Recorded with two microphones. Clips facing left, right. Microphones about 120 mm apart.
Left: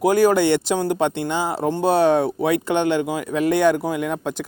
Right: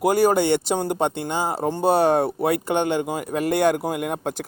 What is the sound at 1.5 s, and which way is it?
Speech, 15° right (ahead or behind).